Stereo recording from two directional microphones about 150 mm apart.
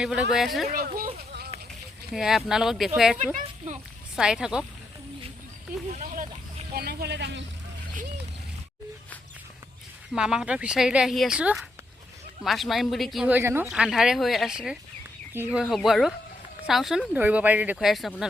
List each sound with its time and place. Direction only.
0.0 s speech: 5° right (ahead or behind)
0.7 s speech: 75° right (ahead or behind)
2.1 s speech: 5° right (ahead or behind)
5.9 s speech: 55° right (ahead or behind)
6.7 s a sound: 90° right
10.1 s speech: 5° right (ahead or behind)
13.3 s speech: 15° right (ahead or behind)
13.7 s speech: 5° right (ahead or behind)